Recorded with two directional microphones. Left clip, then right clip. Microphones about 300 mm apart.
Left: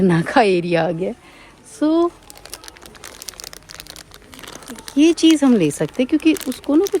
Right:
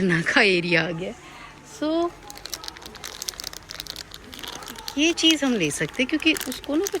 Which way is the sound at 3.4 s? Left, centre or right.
Left.